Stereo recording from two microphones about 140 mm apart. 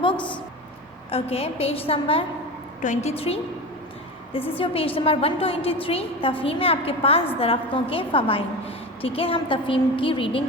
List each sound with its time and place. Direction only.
1.1 s a woman's voice: 45° left (ahead or behind)
2.8 s a woman's voice: 55° left (ahead or behind)
4.5 s a woman's voice: 40° left (ahead or behind)